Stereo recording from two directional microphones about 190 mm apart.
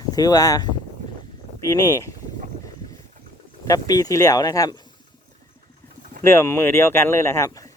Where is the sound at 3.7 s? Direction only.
20° left (ahead or behind).